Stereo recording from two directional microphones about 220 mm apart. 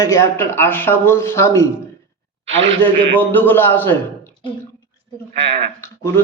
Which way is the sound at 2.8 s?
10° left (ahead or behind).